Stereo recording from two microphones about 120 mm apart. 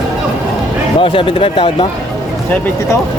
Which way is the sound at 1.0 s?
45° left (ahead or behind).